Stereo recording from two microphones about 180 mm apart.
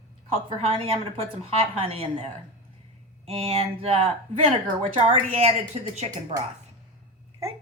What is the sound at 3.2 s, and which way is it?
A woman's voice, 35° right (ahead or behind).